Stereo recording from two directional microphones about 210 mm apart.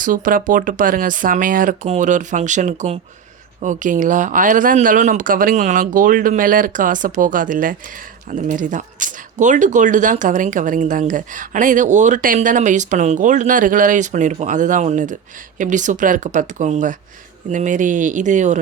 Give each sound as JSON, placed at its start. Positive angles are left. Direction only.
{"t": 0.0, "sound": "speech", "side_deg": -40}